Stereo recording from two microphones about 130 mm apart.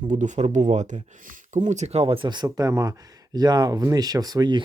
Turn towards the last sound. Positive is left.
turn(degrees=-30)  # may be behind; listen again after turning